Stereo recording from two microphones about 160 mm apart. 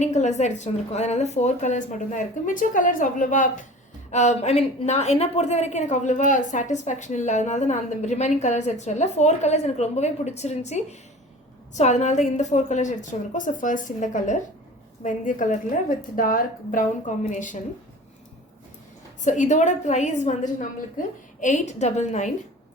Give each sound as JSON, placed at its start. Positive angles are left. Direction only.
{"t": 0.0, "sound": "a woman's voice", "side_deg": 45}
{"t": 19.2, "sound": "a woman's voice", "side_deg": 50}